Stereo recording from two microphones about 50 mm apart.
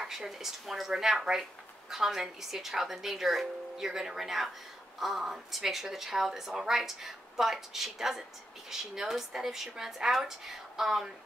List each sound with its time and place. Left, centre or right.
0.0 s a woman's voice: centre